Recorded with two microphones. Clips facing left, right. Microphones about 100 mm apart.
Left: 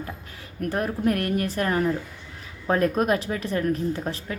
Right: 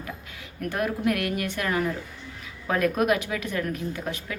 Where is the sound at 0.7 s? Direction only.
35° left (ahead or behind).